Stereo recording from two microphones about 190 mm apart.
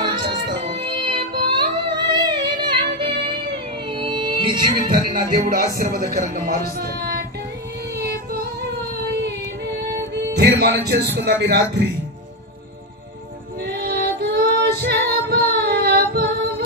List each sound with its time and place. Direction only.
0.0 s music: 25° right (ahead or behind)
4.7 s speech: 45° right (ahead or behind)
7.9 s a sound: 55° right (ahead or behind)
9.8 s speech: 60° right (ahead or behind)
13.6 s female singing: 55° right (ahead or behind)